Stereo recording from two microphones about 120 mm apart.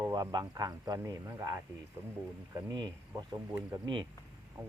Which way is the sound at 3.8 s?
40° right (ahead or behind).